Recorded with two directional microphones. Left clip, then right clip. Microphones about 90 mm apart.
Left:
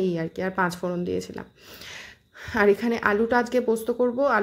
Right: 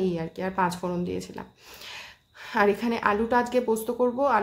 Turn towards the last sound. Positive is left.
turn(degrees=35)  # may be behind; listen again after turning